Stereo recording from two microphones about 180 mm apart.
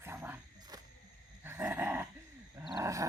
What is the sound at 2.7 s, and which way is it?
Roar, 15° right (ahead or behind).